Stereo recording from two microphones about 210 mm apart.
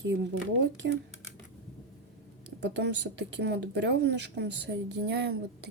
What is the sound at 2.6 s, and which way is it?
Speech, 55° right (ahead or behind).